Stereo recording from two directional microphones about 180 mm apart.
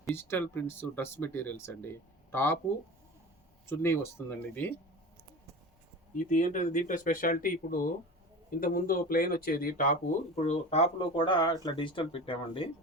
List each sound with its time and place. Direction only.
0.1 s speech: 10° left (ahead or behind)
3.7 s speech: 10° left (ahead or behind)
6.1 s speech: 45° left (ahead or behind); by 12.6 s 30° left (ahead or behind)